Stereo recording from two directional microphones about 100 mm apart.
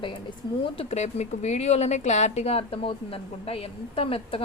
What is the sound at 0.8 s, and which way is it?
A woman's voice, 90° left.